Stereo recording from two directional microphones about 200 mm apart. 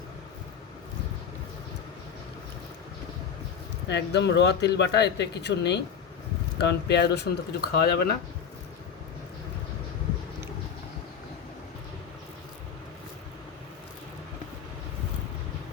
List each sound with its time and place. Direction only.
3.8 s speech: 60° left (ahead or behind)